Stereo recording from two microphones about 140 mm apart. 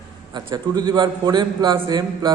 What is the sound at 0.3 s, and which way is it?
A man's voice, 30° right (ahead or behind).